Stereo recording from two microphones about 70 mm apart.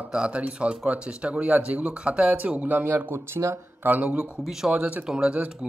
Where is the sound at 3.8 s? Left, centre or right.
Right.